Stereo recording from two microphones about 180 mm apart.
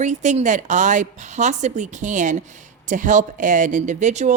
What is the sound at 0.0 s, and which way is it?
Speech, 40° right (ahead or behind).